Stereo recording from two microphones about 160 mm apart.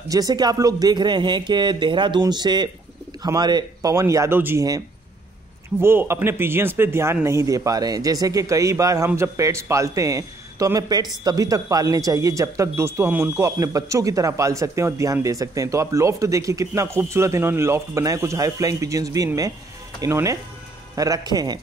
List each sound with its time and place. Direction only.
0.1 s speech: 25° right (ahead or behind)